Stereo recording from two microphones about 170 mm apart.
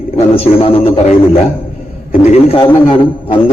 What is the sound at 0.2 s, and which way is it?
Speech, 35° left (ahead or behind).